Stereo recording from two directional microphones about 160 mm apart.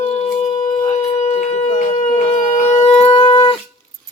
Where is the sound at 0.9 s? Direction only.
40° left (ahead or behind).